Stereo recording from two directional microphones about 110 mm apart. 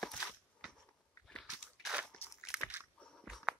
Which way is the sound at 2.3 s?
5° right (ahead or behind).